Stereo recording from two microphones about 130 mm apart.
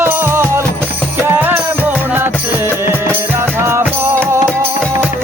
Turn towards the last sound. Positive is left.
turn(degrees=-20)  # may be behind; listen again after turning